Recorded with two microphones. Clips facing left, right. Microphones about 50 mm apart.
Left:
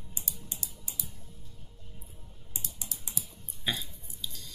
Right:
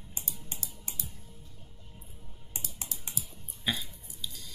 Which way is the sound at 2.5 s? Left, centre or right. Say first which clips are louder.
Right 1 dB; right.